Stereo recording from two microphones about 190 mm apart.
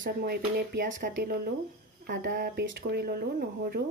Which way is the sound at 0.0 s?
55° right (ahead or behind).